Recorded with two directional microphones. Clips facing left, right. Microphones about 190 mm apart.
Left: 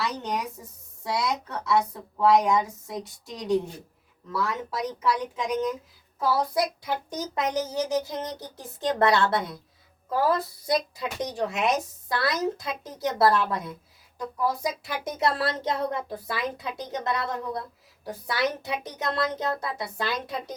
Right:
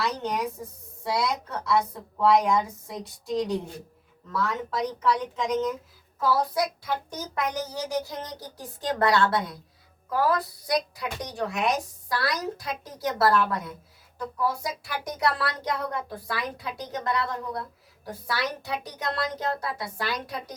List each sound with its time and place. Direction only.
0.0 s a woman's voice: centre (ahead or behind); by 20.4 s 20° left (ahead or behind)